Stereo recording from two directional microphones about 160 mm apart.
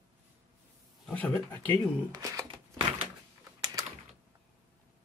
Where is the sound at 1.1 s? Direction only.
5° left (ahead or behind).